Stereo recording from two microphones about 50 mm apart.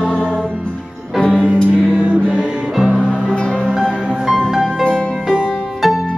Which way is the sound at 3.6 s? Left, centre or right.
Centre.